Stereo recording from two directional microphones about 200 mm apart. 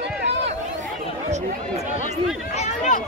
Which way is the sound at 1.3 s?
35° right (ahead or behind).